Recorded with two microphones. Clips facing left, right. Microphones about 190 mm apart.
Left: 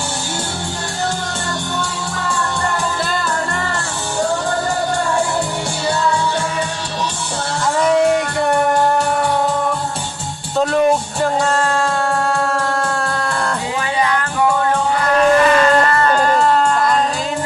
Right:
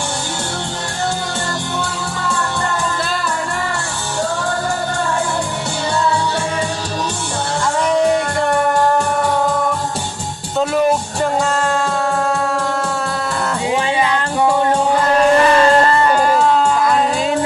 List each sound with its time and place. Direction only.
10.6 s music: centre (ahead or behind)
14.0 s music: 20° right (ahead or behind)
16.0 s a sound: 10° right (ahead or behind)